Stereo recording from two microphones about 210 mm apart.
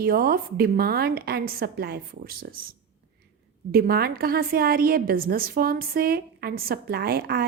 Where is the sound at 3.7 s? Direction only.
45° right (ahead or behind).